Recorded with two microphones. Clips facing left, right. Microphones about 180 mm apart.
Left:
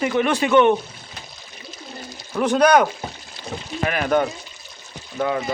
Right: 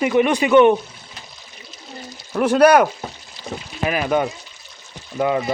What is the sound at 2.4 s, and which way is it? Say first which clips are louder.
A man's voice: right 3 dB; 5° right (ahead or behind).